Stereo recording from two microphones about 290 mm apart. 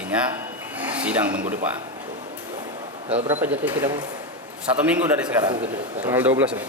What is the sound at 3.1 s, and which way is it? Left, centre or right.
Speech, right.